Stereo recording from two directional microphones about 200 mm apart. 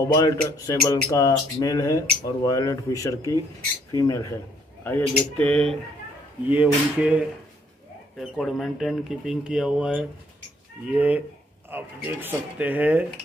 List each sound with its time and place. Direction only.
0.1 s speech: 15° left (ahead or behind)
6.5 s speech: 5° right (ahead or behind)